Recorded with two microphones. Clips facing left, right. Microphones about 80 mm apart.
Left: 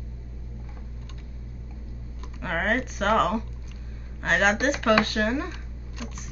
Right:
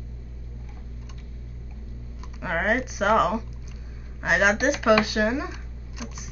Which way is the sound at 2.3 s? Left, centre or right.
Centre.